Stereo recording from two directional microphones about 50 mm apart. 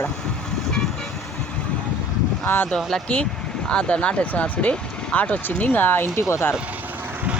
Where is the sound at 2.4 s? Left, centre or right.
Left.